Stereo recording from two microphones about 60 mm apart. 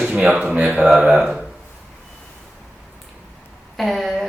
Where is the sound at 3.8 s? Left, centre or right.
Centre.